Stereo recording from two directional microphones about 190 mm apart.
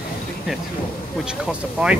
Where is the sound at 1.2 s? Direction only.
5° right (ahead or behind).